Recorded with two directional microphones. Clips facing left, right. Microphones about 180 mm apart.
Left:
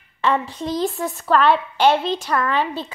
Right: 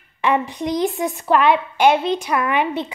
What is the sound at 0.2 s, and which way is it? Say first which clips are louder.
A woman's voice: right 2 dB; 15° right (ahead or behind).